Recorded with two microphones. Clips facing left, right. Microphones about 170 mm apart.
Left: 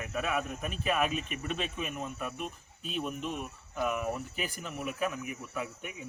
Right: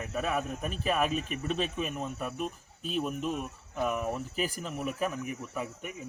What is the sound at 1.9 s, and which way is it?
Speech, centre (ahead or behind).